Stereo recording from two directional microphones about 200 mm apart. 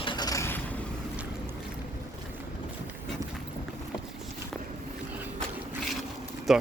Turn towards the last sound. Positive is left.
turn(degrees=0)  # may be behind; listen again after turning